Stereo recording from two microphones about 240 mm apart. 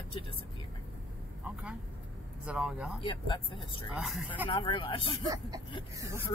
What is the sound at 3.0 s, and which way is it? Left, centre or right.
Speech, centre.